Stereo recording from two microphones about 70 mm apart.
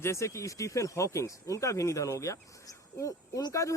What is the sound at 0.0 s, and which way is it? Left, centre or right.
Speech, left.